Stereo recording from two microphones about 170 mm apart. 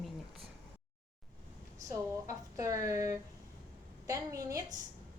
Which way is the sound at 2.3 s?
20° right (ahead or behind).